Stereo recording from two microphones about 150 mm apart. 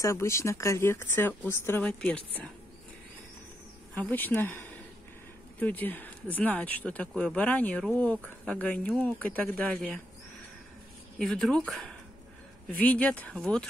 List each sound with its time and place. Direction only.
0.0 s speech: 20° left (ahead or behind)
3.9 s speech: 10° left (ahead or behind)
11.1 s speech: centre (ahead or behind)